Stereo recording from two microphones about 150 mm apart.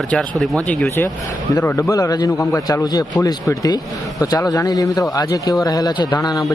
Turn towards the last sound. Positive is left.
turn(degrees=25)  # may be behind; listen again after turning